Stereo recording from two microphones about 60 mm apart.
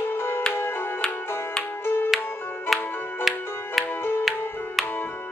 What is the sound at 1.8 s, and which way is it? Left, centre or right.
Music, left.